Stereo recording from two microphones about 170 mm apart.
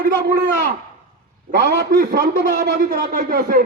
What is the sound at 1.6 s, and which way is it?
A man's voice, 65° right (ahead or behind).